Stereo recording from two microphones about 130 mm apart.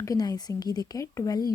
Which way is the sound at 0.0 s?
30° left (ahead or behind).